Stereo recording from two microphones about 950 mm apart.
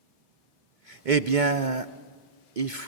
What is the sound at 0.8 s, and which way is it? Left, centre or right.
A man's voice, right.